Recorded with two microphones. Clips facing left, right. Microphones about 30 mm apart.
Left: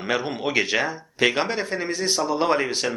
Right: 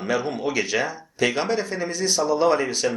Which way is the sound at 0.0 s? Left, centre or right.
Left.